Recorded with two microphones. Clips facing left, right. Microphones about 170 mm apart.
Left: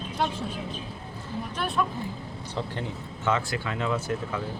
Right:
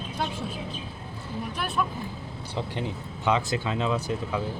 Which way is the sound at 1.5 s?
5° right (ahead or behind).